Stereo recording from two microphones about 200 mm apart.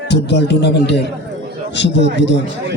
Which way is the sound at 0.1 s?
55° left (ahead or behind).